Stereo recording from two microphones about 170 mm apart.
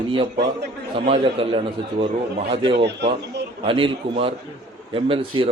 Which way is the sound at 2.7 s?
80° right.